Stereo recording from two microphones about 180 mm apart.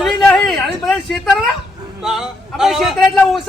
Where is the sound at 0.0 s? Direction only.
5° left (ahead or behind).